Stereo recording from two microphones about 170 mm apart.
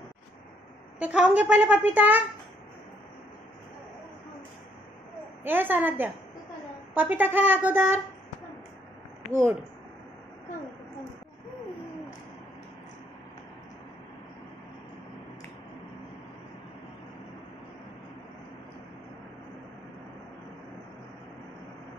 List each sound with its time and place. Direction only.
0.9 s a woman's voice: 5° right (ahead or behind)
5.4 s a woman's voice: 10° right (ahead or behind)
9.3 s a woman's voice: 15° right (ahead or behind)